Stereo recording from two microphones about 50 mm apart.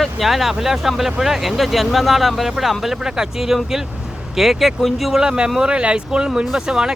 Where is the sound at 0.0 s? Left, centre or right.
Centre.